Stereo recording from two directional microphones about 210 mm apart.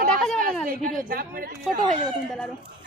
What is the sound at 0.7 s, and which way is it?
Speech, 40° right (ahead or behind).